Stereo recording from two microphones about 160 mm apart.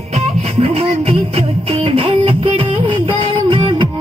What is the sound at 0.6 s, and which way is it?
Music, 35° right (ahead or behind).